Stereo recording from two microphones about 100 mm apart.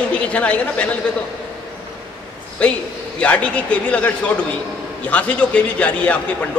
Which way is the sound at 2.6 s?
10° left (ahead or behind).